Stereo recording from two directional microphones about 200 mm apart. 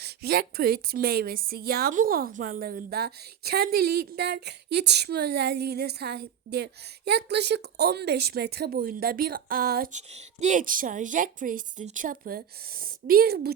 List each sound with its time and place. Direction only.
0.0 s a woman's voice: 50° right (ahead or behind)